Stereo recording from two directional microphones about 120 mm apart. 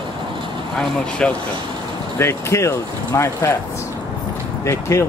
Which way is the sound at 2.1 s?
20° left (ahead or behind).